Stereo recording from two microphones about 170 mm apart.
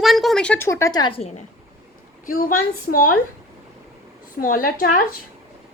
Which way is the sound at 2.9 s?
55° left (ahead or behind).